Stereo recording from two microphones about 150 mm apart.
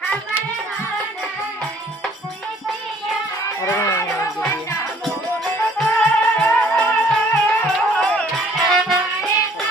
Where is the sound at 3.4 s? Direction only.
20° left (ahead or behind).